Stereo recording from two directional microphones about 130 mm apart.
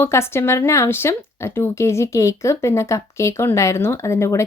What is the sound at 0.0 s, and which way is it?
Speech, 20° left (ahead or behind).